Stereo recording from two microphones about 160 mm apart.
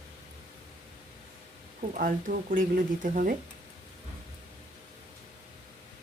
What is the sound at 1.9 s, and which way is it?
Speech, 60° right (ahead or behind).